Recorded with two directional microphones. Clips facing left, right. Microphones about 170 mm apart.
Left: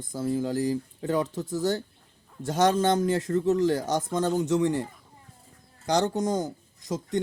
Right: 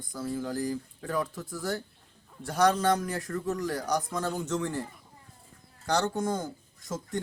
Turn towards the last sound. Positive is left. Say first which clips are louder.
# left 5 dB
turn(degrees=20)  # may be behind; listen again after turning